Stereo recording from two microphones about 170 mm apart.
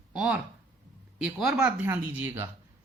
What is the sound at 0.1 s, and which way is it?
Speech, 5° right (ahead or behind).